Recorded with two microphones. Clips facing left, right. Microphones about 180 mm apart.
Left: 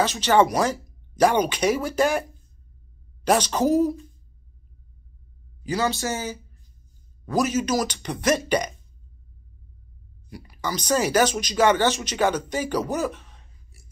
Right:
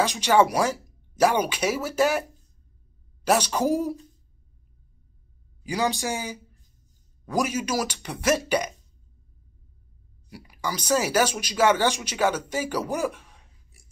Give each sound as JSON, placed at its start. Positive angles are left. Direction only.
{"t": 0.0, "sound": "speech", "side_deg": -10}
{"t": 3.3, "sound": "speech", "side_deg": -10}
{"t": 5.6, "sound": "speech", "side_deg": -15}
{"t": 10.3, "sound": "speech", "side_deg": -10}